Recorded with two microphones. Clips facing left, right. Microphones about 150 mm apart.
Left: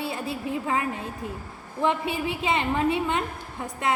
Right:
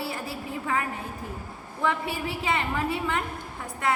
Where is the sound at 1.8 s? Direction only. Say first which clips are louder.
Left 3 dB; 20° left (ahead or behind).